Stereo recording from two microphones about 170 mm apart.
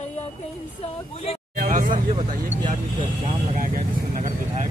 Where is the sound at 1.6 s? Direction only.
50° right (ahead or behind).